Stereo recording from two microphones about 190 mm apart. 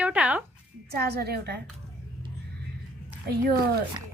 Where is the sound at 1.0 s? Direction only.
55° right (ahead or behind).